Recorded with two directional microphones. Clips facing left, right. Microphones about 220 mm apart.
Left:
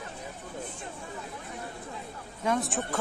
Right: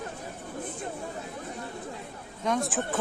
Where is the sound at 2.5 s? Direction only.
Centre (ahead or behind).